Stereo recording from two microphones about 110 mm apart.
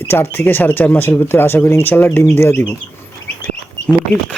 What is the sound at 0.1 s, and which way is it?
Speech, 20° left (ahead or behind).